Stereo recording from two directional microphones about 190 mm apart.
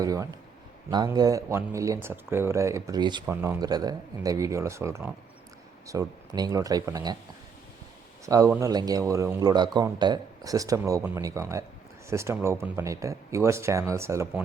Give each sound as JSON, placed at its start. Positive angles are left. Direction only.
{"t": 0.0, "sound": "speech", "side_deg": -20}
{"t": 8.4, "sound": "speech", "side_deg": -15}